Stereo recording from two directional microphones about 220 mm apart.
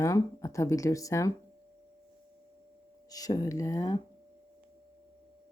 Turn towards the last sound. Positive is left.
turn(degrees=15)  # may be behind; listen again after turning